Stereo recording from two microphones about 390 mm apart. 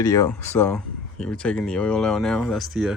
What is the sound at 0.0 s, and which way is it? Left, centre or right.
Speech, centre.